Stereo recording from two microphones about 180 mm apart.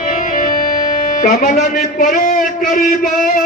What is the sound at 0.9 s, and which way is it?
A man's voice, 45° left (ahead or behind).